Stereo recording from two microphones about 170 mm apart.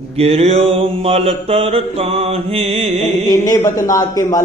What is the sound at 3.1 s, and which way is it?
Mantra, 25° left (ahead or behind).